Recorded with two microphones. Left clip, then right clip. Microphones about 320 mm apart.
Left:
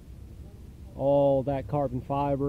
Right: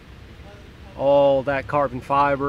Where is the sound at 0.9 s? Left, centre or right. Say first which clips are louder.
Right 7 dB; centre.